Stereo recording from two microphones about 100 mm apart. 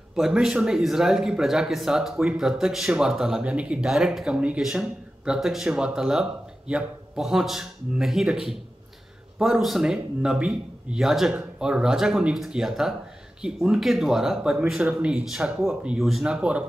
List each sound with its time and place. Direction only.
0.1 s speech: 5° right (ahead or behind)